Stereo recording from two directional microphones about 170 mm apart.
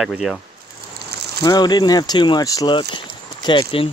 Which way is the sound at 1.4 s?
25° left (ahead or behind).